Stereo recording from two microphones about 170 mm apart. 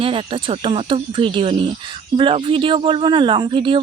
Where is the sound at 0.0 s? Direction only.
30° right (ahead or behind).